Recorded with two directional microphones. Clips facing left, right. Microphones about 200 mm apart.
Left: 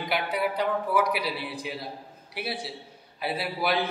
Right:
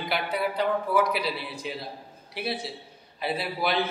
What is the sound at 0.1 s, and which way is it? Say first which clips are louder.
A man's voice: left 1 dB; 15° left (ahead or behind).